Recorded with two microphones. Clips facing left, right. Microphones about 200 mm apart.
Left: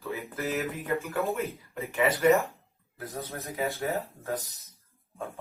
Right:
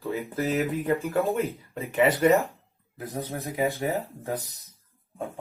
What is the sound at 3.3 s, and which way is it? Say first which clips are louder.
A man's voice: right 5 dB; 15° right (ahead or behind).